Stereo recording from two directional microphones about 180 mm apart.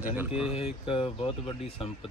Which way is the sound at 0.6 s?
30° left (ahead or behind).